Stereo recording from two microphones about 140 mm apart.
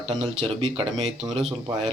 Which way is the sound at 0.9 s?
Centre (ahead or behind).